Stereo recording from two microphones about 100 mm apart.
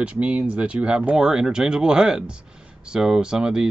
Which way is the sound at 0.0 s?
10° right (ahead or behind).